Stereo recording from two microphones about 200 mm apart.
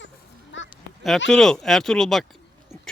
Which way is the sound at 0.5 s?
65° left (ahead or behind).